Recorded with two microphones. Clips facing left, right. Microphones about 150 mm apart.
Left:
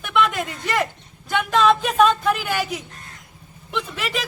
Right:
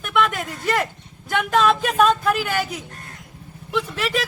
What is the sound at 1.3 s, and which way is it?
Speech, 5° right (ahead or behind).